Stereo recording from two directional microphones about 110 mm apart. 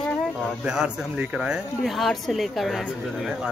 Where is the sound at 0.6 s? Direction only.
5° right (ahead or behind).